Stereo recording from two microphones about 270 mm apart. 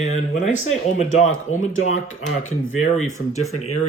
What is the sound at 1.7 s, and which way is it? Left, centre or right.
Speech, left.